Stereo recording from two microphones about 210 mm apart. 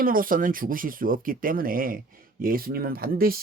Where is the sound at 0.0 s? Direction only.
40° right (ahead or behind).